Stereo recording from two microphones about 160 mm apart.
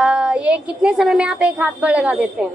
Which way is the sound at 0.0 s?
5° right (ahead or behind).